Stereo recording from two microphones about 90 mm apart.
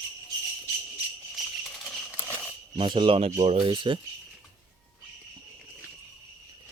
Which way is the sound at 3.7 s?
60° right (ahead or behind).